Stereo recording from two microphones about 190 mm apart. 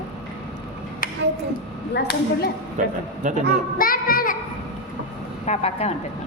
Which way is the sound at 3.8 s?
50° left (ahead or behind).